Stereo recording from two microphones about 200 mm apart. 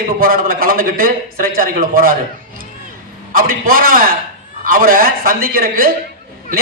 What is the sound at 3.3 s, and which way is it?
A man's voice, 45° right (ahead or behind).